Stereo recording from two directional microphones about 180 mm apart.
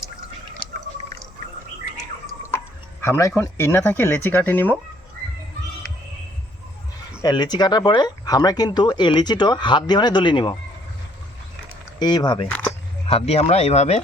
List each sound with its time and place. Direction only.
3.0 s speech: 15° left (ahead or behind)
7.2 s speech: 25° left (ahead or behind)
11.9 s speech: 25° left (ahead or behind)